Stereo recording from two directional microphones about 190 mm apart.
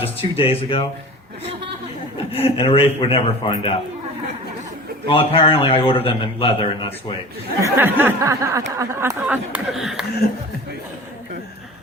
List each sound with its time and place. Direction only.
0.0 s a man's voice: 30° left (ahead or behind)
2.3 s a man's voice: 30° left (ahead or behind)
5.0 s a man's voice: 30° left (ahead or behind)
7.6 s speech: 10° right (ahead or behind)